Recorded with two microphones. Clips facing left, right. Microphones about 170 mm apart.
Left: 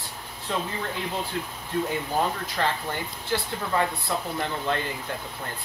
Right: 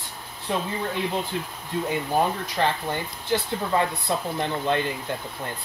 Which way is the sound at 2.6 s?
20° right (ahead or behind).